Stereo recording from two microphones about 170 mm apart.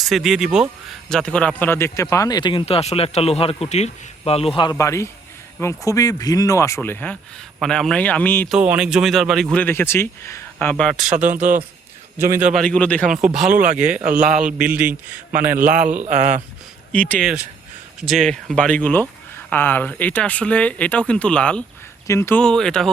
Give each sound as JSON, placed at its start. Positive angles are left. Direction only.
{"t": 0.0, "sound": "speech", "side_deg": 0}
{"t": 8.4, "sound": "speech", "side_deg": -5}
{"t": 11.3, "sound": "speech", "side_deg": -50}
{"t": 12.1, "sound": "speech", "side_deg": -15}
{"t": 12.6, "sound": "speech", "side_deg": 5}
{"t": 13.2, "sound": "speech", "side_deg": -5}
{"t": 16.0, "sound": "speech", "side_deg": -45}
{"t": 16.9, "sound": "speech", "side_deg": 10}